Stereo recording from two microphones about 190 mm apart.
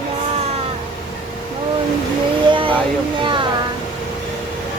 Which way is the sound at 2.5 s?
25° right (ahead or behind).